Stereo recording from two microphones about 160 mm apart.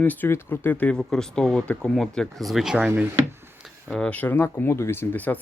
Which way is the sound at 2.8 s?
15° right (ahead or behind).